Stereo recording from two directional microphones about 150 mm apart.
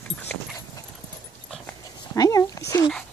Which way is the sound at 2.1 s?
25° left (ahead or behind).